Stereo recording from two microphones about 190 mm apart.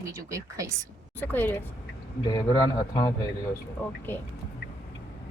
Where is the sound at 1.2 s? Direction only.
10° left (ahead or behind).